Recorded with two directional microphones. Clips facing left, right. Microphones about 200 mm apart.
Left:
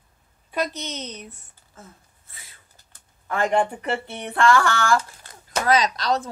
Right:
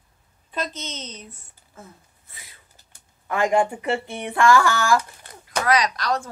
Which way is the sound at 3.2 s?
10° right (ahead or behind).